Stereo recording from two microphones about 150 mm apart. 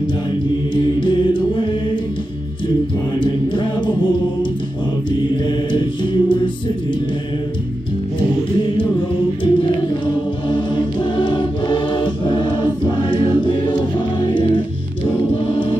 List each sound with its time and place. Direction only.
1.0 s mantra: 30° left (ahead or behind)
3.2 s a capella: 30° left (ahead or behind)
5.3 s mantra: 35° left (ahead or behind)
9.4 s choir: 35° left (ahead or behind)